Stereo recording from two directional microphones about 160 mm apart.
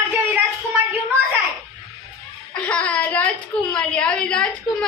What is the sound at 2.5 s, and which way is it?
A woman's voice, 10° left (ahead or behind).